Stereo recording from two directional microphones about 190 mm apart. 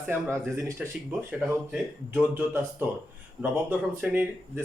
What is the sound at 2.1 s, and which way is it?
Speech, 10° right (ahead or behind).